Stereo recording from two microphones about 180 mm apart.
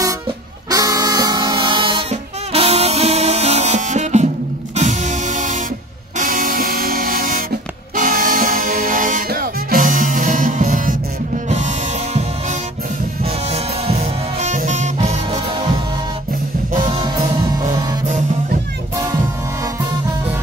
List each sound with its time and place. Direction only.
0.7 s music: 20° right (ahead or behind); by 15.4 s 40° right (ahead or behind)